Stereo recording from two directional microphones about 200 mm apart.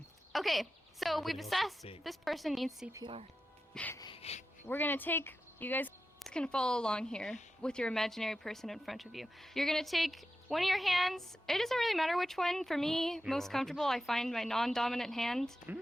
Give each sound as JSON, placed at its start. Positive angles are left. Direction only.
{"t": 0.3, "sound": "a woman's voice", "side_deg": 0}
{"t": 2.9, "sound": "speech", "side_deg": -25}
{"t": 3.8, "sound": "music", "side_deg": 10}
{"t": 4.0, "sound": "music", "side_deg": 30}
{"t": 4.7, "sound": "a woman's voice", "side_deg": 10}